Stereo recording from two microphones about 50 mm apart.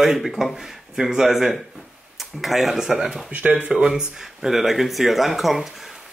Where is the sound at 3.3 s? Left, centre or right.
Right.